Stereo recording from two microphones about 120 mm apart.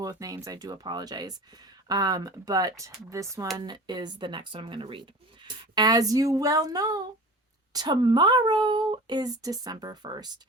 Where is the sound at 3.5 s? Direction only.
35° right (ahead or behind).